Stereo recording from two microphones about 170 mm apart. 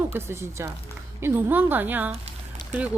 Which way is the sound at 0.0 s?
15° right (ahead or behind).